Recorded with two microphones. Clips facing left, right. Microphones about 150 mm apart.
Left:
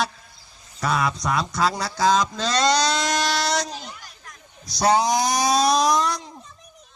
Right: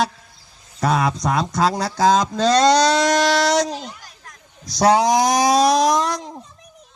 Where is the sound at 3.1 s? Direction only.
80° right.